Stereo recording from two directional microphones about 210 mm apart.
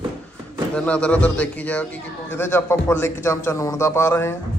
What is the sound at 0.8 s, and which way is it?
A man's voice, 5° left (ahead or behind).